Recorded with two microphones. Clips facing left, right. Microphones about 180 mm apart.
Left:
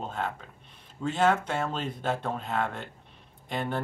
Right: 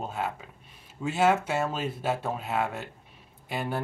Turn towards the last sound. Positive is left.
turn(degrees=-5)  # may be behind; listen again after turning